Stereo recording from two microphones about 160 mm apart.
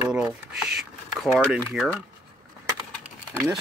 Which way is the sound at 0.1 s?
5° right (ahead or behind).